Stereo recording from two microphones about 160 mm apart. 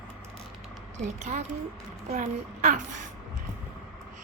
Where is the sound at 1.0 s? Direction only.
50° right (ahead or behind).